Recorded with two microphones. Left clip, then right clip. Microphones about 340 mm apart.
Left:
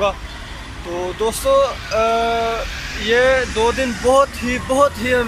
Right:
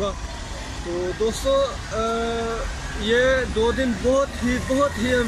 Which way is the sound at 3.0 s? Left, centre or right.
Centre.